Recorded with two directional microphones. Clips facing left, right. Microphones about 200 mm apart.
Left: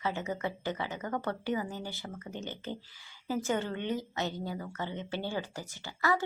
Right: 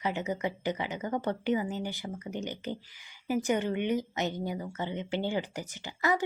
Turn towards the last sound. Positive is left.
turn(degrees=-20)  # may be behind; listen again after turning